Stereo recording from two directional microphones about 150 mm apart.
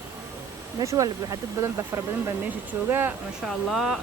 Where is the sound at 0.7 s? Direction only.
20° right (ahead or behind).